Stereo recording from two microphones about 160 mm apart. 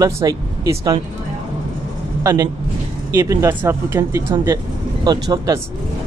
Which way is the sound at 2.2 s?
25° right (ahead or behind).